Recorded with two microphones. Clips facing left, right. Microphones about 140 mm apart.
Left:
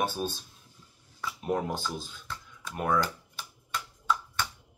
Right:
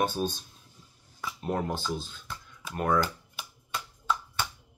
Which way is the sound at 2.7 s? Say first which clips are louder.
Right 1 dB; 5° left (ahead or behind).